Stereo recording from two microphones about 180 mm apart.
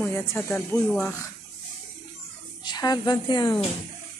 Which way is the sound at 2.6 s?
25° left (ahead or behind).